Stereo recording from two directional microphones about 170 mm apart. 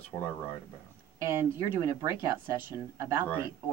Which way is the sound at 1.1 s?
15° right (ahead or behind).